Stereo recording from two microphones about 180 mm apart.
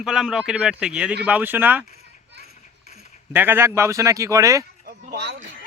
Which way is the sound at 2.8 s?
40° left (ahead or behind).